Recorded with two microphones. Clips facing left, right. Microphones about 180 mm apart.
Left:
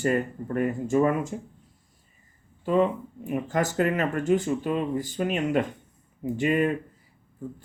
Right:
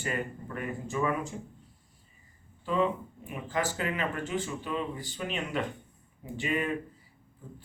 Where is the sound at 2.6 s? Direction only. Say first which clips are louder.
Left 6 dB; 45° left (ahead or behind).